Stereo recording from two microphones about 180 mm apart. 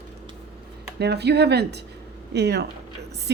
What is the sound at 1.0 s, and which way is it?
A woman's voice, 65° right (ahead or behind).